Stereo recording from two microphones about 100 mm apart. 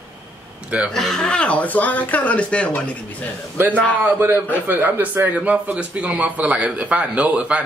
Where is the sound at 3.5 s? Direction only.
15° right (ahead or behind).